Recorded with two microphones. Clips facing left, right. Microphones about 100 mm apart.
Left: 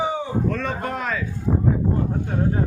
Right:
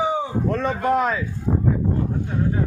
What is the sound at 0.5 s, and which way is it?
Speech, 20° right (ahead or behind).